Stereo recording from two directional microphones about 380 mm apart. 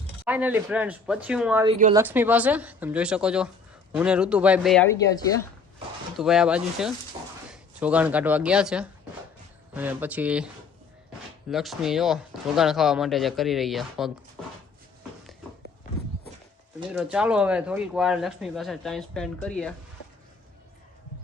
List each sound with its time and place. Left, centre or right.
0.3 s speech: centre
17.0 s speech: centre